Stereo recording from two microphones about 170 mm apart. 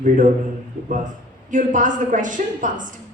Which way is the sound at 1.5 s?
50° right (ahead or behind).